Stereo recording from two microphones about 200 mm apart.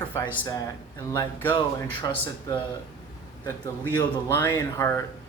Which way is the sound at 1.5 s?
25° left (ahead or behind).